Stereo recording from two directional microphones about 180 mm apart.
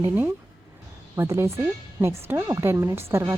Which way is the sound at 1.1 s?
15° right (ahead or behind).